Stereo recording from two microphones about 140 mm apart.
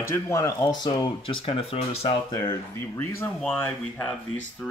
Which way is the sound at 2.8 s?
15° left (ahead or behind).